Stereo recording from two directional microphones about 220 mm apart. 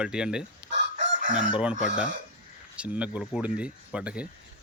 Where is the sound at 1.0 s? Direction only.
35° right (ahead or behind).